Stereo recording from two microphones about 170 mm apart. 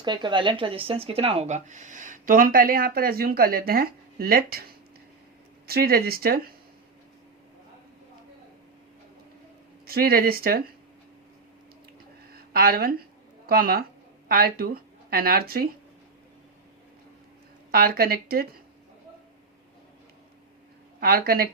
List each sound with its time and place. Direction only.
0.0 s speech: 25° right (ahead or behind); by 6.5 s 60° right (ahead or behind)
9.8 s speech: 60° right (ahead or behind)
12.3 s a sound: 60° right (ahead or behind)
13.5 s speech: 60° right (ahead or behind)
17.7 s speech: 60° right (ahead or behind)
21.0 s speech: 60° right (ahead or behind)